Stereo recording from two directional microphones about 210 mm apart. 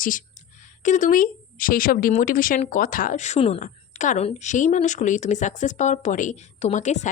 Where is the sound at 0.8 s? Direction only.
35° left (ahead or behind).